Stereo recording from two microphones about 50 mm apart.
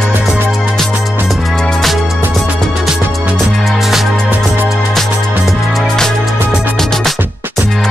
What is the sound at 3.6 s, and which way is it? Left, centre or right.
Music, centre.